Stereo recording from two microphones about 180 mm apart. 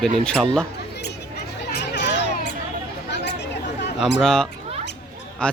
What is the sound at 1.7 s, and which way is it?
Children playing, 70° left (ahead or behind).